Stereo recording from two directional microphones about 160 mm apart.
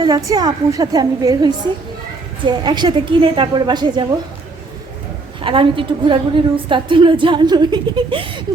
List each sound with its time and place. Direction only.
0.3 s a woman's voice: 25° right (ahead or behind)
5.4 s a woman's voice: 35° right (ahead or behind)